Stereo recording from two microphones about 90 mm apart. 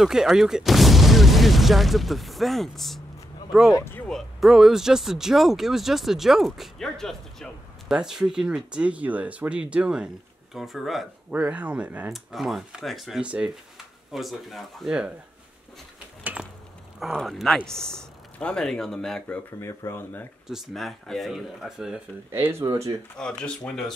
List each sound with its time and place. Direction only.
0.0 s speech: 5° right (ahead or behind)
3.7 s speech: 30° left (ahead or behind)
4.1 s speech: centre (ahead or behind)
7.9 s speech: 5° right (ahead or behind)
11.3 s speech: 15° right (ahead or behind)
12.1 s speech: centre (ahead or behind)
14.1 s speech: centre (ahead or behind)
17.0 s speech: centre (ahead or behind)
19.6 s speech: 30° left (ahead or behind)
20.4 s speech: centre (ahead or behind)
22.3 s speech: 25° right (ahead or behind)
22.7 s speech: 40° right (ahead or behind)
23.1 s speech: 10° left (ahead or behind)